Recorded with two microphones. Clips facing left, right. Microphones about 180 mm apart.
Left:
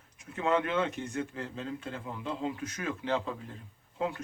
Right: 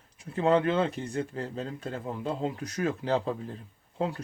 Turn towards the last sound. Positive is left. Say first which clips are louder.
# right 2 dB
turn(degrees=-35)  # may be behind; listen again after turning